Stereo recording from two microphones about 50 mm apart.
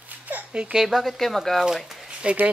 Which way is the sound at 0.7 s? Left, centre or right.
Centre.